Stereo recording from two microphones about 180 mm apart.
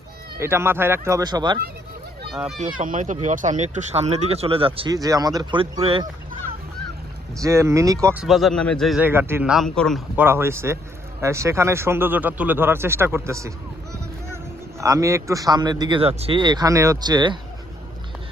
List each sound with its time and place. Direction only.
0.3 s speech: 15° right (ahead or behind)
2.3 s speech: centre (ahead or behind)
2.6 s speech: 45° right (ahead or behind); by 6.1 s 25° right (ahead or behind)
7.4 s speech: 15° right (ahead or behind)
8.0 s speech: 5° right (ahead or behind)
9.0 s speech: 15° right (ahead or behind); by 10.0 s 5° left (ahead or behind)
10.2 s speech: 15° right (ahead or behind)
14.8 s a man's voice: 15° right (ahead or behind)